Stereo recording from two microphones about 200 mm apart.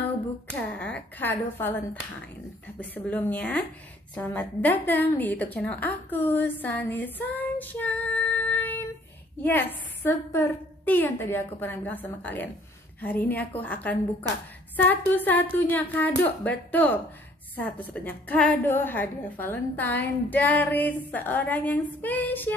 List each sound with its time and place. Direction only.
0.6 s a woman's voice: 5° left (ahead or behind)
2.8 s a woman's voice: 10° left (ahead or behind)
14.2 s a woman's voice: 20° right (ahead or behind)
14.8 s a woman's voice: 10° left (ahead or behind)